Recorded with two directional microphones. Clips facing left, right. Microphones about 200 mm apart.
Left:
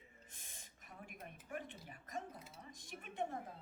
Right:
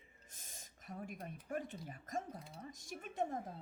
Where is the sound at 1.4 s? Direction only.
40° right (ahead or behind).